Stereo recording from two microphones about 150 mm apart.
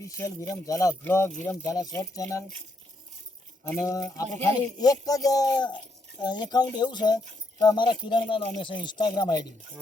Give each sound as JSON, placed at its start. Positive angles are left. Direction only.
{"t": 0.0, "sound": "speech", "side_deg": 20}
{"t": 3.6, "sound": "speech", "side_deg": 15}
{"t": 4.3, "sound": "speech", "side_deg": -45}
{"t": 4.8, "sound": "speech", "side_deg": 25}